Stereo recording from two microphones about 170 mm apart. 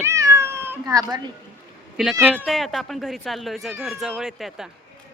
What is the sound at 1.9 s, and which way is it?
Speech, 5° right (ahead or behind).